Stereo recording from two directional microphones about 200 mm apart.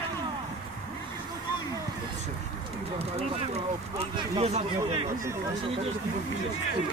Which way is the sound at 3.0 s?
30° right (ahead or behind).